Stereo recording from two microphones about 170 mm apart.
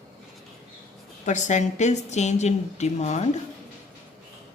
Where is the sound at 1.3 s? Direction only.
45° left (ahead or behind).